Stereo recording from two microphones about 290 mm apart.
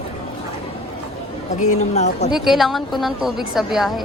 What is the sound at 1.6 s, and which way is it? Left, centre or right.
Speech, left.